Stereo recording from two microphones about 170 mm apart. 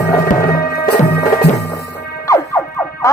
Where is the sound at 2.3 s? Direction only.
20° left (ahead or behind).